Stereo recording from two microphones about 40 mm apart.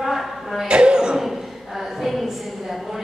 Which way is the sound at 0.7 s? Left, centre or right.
Right.